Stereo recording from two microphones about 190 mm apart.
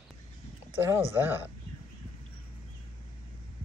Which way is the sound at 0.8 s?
10° right (ahead or behind).